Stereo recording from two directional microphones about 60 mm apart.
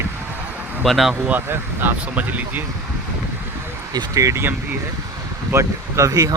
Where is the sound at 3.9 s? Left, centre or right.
Right.